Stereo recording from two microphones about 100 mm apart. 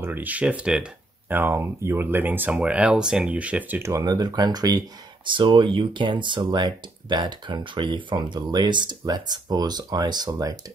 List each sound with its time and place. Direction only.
0.0 s speech: 20° right (ahead or behind)
1.3 s speech: 20° right (ahead or behind)
3.9 s speech: 40° right (ahead or behind)
5.3 s speech: 55° right (ahead or behind)